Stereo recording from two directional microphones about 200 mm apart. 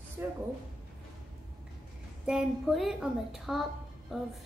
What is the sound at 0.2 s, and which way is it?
Speech, 15° right (ahead or behind).